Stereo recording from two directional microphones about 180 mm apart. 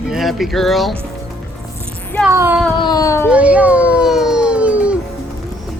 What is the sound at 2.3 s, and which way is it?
Child singing, 10° right (ahead or behind).